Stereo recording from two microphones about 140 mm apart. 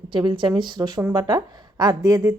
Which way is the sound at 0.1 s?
35° right (ahead or behind).